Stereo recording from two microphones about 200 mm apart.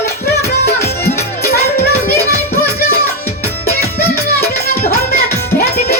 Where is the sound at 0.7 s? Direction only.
10° left (ahead or behind).